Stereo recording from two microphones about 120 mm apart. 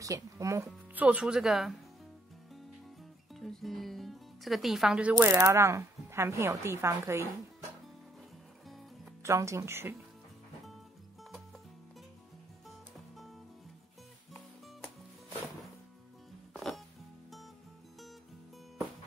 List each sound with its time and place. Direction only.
0.0 s speech: 25° right (ahead or behind)
0.9 s speech: 10° right (ahead or behind)
3.3 s speech: centre (ahead or behind)
5.1 s speech: 20° right (ahead or behind)
8.6 s music: centre (ahead or behind)
9.2 s speech: 25° right (ahead or behind)
12.6 s music: centre (ahead or behind)
16.5 s music: centre (ahead or behind)